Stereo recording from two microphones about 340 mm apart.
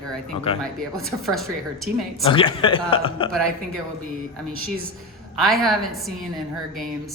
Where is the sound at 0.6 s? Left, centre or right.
Centre.